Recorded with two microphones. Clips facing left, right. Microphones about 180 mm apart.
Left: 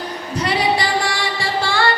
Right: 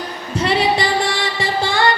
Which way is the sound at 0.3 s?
25° right (ahead or behind).